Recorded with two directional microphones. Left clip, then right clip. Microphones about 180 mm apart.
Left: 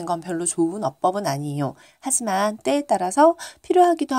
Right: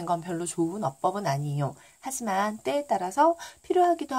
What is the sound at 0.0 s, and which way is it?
Speech, 30° left (ahead or behind).